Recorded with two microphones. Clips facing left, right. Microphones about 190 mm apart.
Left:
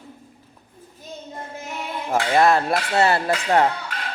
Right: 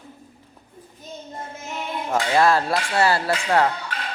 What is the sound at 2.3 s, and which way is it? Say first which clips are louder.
A woman's voice: left 1 dB; 20° left (ahead or behind).